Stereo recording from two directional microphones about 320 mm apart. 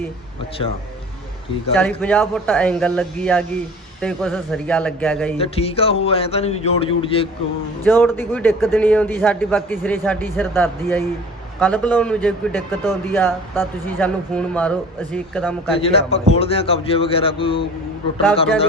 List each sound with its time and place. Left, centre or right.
1.7 s a man's voice: centre
5.4 s a man's voice: centre
7.9 s a man's voice: centre
15.8 s a man's voice: centre